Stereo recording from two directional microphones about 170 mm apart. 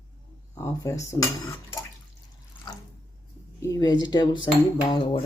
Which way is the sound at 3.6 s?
20° left (ahead or behind).